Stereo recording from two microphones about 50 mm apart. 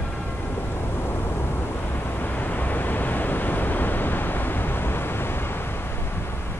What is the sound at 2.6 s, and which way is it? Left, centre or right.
Waves, left.